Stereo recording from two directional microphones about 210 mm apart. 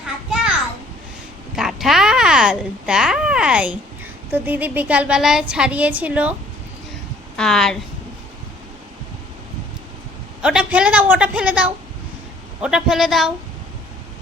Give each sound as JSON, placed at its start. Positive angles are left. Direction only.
{"t": 1.5, "sound": "a sound", "side_deg": 0}
{"t": 4.3, "sound": "a woman's voice", "side_deg": -10}
{"t": 7.3, "sound": "a woman's voice", "side_deg": 0}
{"t": 10.4, "sound": "a woman's voice", "side_deg": -5}